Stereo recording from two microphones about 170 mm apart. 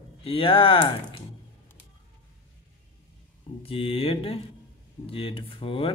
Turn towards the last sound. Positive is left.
turn(degrees=30)  # may be behind; listen again after turning